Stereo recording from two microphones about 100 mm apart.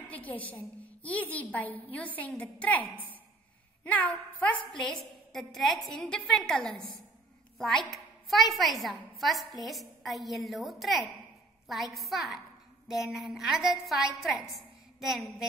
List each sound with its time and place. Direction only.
0.1 s a woman's voice: 15° left (ahead or behind)
3.8 s a woman's voice: 15° left (ahead or behind)
5.3 s a woman's voice: 5° left (ahead or behind)